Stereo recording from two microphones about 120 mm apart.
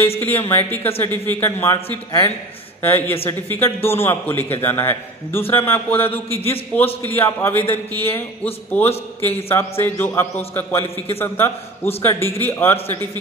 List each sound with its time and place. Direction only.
0.5 s a man's voice: 20° left (ahead or behind)
9.2 s a man's voice: 20° left (ahead or behind)